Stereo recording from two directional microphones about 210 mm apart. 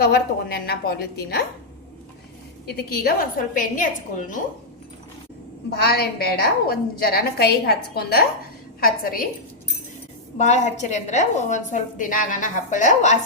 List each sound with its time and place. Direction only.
0.0 s a woman's voice: 50° left (ahead or behind)
2.6 s a woman's voice: 50° left (ahead or behind)
5.7 s a woman's voice: 50° left (ahead or behind)
10.3 s a woman's voice: 35° left (ahead or behind)